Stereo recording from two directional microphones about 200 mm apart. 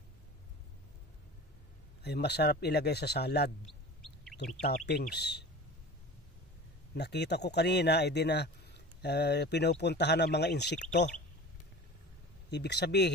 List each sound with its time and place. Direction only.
2.0 s speech: 55° left (ahead or behind)
3.6 s bird: centre (ahead or behind)
4.6 s speech: 55° left (ahead or behind)
7.0 s speech: 55° left (ahead or behind)
12.4 s speech: 60° left (ahead or behind)